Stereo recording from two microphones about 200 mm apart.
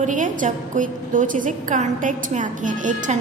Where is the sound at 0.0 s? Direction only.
40° right (ahead or behind).